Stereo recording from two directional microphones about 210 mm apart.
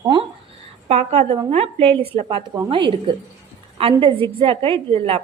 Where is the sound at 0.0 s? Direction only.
20° right (ahead or behind).